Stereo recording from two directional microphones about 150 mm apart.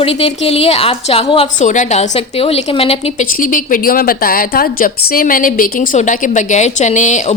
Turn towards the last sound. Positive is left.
turn(degrees=55)  # may be behind; listen again after turning